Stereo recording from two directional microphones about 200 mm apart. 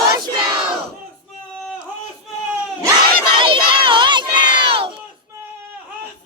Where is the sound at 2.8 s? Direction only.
25° right (ahead or behind).